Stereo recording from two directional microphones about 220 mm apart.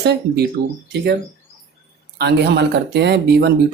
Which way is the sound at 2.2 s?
50° right (ahead or behind).